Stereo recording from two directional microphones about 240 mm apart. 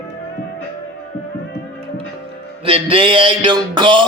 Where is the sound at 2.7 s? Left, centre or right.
Right.